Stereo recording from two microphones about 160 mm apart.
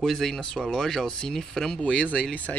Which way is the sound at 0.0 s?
Centre (ahead or behind).